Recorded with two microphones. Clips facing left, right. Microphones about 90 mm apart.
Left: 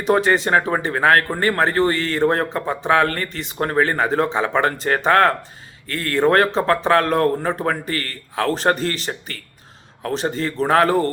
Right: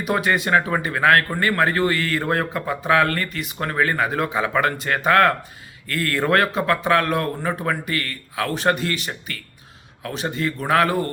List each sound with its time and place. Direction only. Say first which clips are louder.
0.1 s speech: left 3 dB; 30° left (ahead or behind)